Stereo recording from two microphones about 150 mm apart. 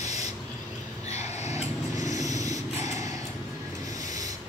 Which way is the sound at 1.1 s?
45° left (ahead or behind).